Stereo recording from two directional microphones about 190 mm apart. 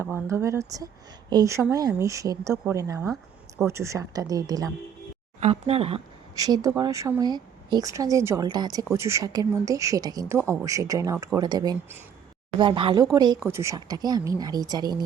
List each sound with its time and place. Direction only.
0.0 s a woman's voice: 15° right (ahead or behind)
5.4 s speech: 30° right (ahead or behind)
6.3 s a woman's voice: 20° right (ahead or behind)